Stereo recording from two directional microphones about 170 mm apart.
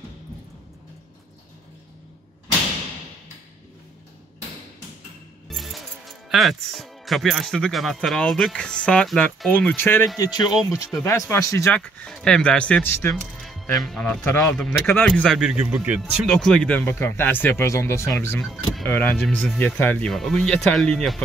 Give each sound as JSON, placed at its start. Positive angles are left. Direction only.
{"t": 5.5, "sound": "speech", "side_deg": 0}
{"t": 10.4, "sound": "speech", "side_deg": 0}
{"t": 11.1, "sound": "speech", "side_deg": 15}
{"t": 15.4, "sound": "speech", "side_deg": -10}
{"t": 18.4, "sound": "speech", "side_deg": 0}
{"t": 18.9, "sound": "speech", "side_deg": 10}